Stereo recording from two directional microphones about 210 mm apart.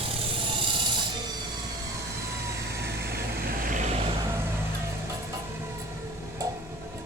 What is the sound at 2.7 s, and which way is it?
Vehicle, 50° right (ahead or behind).